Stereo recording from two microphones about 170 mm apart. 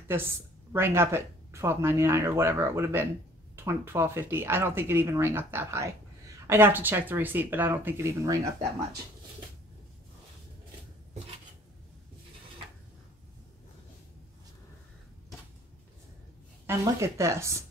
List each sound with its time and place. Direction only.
0.7 s speech: 15° right (ahead or behind)
16.6 s speech: 15° right (ahead or behind)